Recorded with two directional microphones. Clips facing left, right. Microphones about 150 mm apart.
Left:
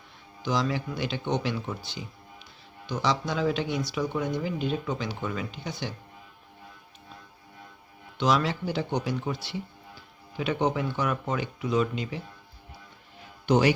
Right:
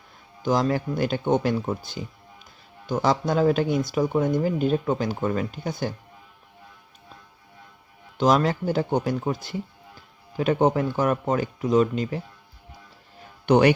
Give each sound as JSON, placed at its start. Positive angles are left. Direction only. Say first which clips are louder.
{"t": 0.4, "sound": "speech", "louder": "right 5 dB", "side_deg": -45}
{"t": 8.2, "sound": "speech", "louder": "right 5 dB", "side_deg": -45}
{"t": 13.4, "sound": "speech", "louder": "right 5 dB", "side_deg": -60}